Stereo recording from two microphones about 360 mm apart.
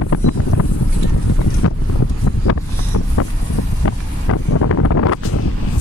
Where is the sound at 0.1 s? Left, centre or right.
Left.